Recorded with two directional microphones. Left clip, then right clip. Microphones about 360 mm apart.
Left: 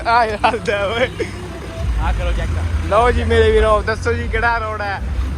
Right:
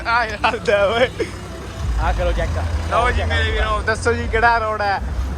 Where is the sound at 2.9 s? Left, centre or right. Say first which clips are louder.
Left 5 dB; centre.